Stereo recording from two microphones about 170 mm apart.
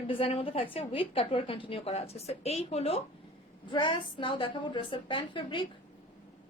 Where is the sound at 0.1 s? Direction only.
35° left (ahead or behind).